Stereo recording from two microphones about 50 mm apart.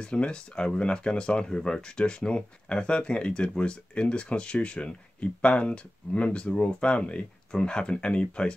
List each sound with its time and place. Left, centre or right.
0.0 s speech: centre